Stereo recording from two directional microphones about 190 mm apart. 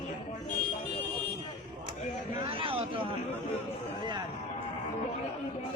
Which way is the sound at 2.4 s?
30° right (ahead or behind).